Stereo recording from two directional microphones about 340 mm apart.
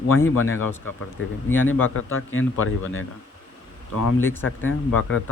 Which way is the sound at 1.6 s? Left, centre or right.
Left.